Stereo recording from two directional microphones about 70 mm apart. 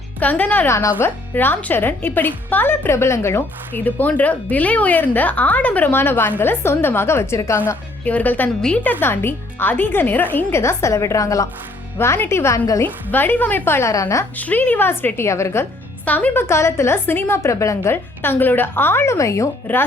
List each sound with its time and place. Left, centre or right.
0.2 s a woman's voice: left
3.7 s a woman's voice: left
8.0 s a woman's voice: left
11.9 s a woman's voice: left
12.8 s a woman's voice: left
13.9 s a woman's voice: left
14.3 s a woman's voice: left
16.0 s a woman's voice: left
17.9 s a woman's voice: left
19.1 s a woman's voice: left
19.7 s a woman's voice: left